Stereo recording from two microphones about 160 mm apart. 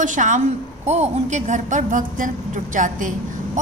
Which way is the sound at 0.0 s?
50° right (ahead or behind).